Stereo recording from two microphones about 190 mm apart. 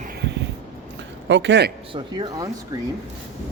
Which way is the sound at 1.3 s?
70° right (ahead or behind).